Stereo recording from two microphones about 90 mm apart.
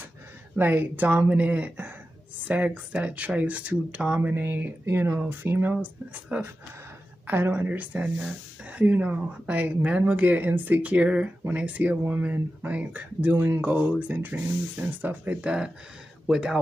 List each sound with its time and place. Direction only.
0.6 s speech: 20° right (ahead or behind)
7.2 s speech: 20° right (ahead or behind)